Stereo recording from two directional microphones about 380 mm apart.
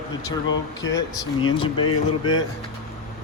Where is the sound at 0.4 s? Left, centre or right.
Left.